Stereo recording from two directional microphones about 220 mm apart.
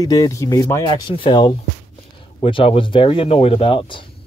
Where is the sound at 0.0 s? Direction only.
15° left (ahead or behind).